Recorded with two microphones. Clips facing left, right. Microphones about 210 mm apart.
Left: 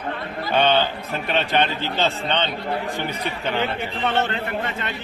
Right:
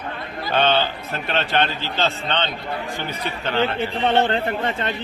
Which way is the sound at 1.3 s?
15° left (ahead or behind).